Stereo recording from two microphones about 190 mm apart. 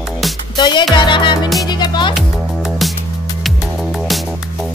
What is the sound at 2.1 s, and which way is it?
Music, centre (ahead or behind).